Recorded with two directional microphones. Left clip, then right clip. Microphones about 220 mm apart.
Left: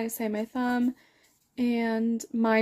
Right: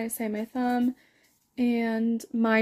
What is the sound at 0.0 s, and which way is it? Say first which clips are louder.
Speech: left 1 dB; centre (ahead or behind).